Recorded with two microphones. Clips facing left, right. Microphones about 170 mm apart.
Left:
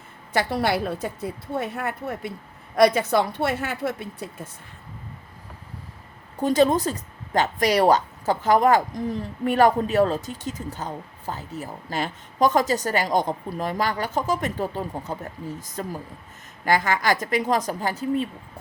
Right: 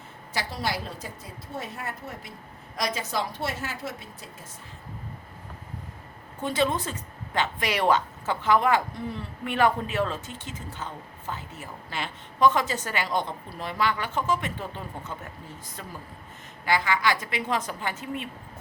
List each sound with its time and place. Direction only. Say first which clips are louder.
0.3 s a woman's voice: left 8 dB; 60° left (ahead or behind)
6.4 s a woman's voice: left 7 dB; 40° left (ahead or behind)